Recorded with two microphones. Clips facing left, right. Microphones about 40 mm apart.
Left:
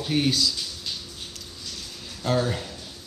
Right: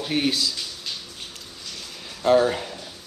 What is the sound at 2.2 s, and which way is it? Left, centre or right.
Speech, right.